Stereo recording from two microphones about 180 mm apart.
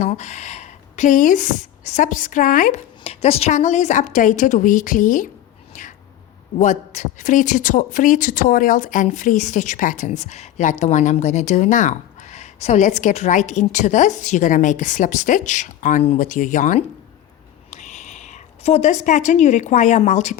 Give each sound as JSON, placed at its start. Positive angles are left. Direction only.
{"t": 0.0, "sound": "speech", "side_deg": 40}
{"t": 6.6, "sound": "a woman's voice", "side_deg": 45}